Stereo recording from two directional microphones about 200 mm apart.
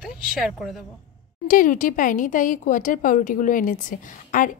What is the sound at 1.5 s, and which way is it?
Speech, 40° left (ahead or behind).